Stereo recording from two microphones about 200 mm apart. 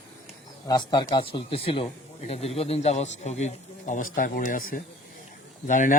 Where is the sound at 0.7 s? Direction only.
20° left (ahead or behind); by 6.0 s 40° left (ahead or behind).